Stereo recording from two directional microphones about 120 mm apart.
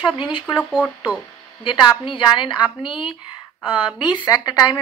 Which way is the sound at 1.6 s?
45° left (ahead or behind).